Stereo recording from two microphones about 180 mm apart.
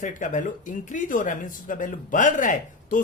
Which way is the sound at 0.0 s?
45° left (ahead or behind).